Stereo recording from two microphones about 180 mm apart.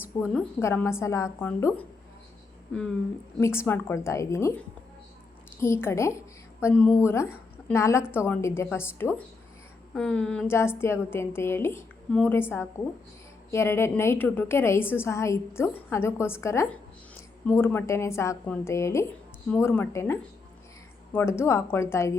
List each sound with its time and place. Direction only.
0.0 s a woman's voice: 5° right (ahead or behind)
0.6 s a woman's voice: 15° left (ahead or behind)
3.3 s a woman's voice: 15° left (ahead or behind)